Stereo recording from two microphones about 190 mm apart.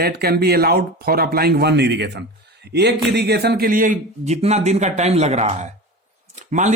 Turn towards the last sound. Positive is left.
turn(degrees=-40)  # may be behind; listen again after turning